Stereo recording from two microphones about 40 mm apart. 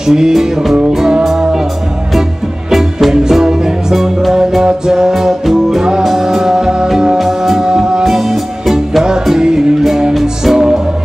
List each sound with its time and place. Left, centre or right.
0.0 s music: centre
2.7 s music: centre
7.2 s music: centre
7.6 s music: centre
8.0 s music: centre
9.4 s music: centre